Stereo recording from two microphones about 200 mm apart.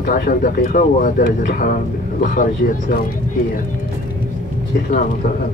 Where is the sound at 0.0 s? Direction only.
45° left (ahead or behind).